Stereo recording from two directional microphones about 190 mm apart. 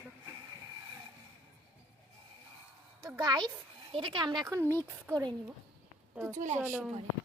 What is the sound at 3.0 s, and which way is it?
Speech, 20° right (ahead or behind).